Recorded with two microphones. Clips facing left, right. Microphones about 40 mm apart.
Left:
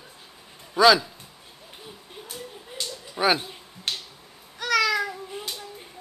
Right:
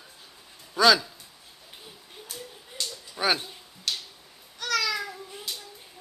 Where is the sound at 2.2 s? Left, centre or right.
Centre.